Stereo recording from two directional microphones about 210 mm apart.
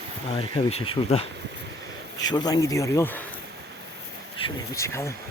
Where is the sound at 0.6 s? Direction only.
25° left (ahead or behind).